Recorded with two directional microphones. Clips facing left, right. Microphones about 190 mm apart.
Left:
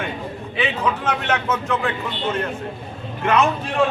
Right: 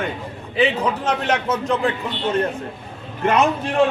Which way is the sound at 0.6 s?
35° right (ahead or behind).